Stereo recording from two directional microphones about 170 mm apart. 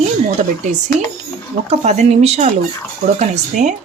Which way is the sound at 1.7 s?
40° right (ahead or behind).